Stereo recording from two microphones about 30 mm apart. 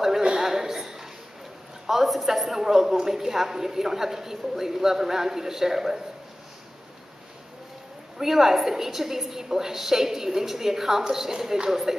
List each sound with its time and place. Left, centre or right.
0.4 s a sound: centre
1.9 s a woman's voice: centre
8.2 s a woman's voice: centre